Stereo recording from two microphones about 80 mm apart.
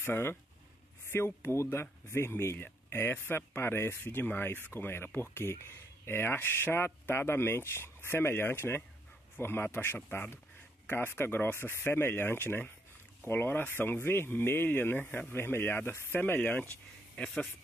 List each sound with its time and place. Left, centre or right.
0.0 s speech: left
17.1 s speech: centre